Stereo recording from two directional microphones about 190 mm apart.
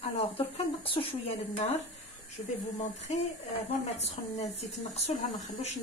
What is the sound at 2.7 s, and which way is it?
Speech, 35° left (ahead or behind).